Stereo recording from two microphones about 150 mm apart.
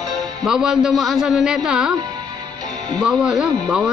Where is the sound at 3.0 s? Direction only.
5° right (ahead or behind).